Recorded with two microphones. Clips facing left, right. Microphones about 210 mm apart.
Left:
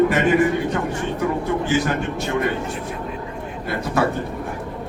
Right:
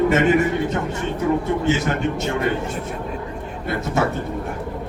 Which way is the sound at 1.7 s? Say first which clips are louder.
Left 1 dB; 25° right (ahead or behind).